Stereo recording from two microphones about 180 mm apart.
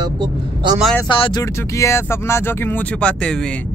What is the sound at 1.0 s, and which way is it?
Speech, 25° left (ahead or behind).